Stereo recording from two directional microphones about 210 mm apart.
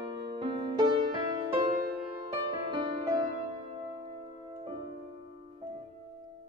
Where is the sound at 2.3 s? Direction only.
20° right (ahead or behind).